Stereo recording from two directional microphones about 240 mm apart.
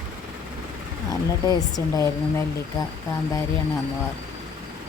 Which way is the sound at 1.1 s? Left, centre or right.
Centre.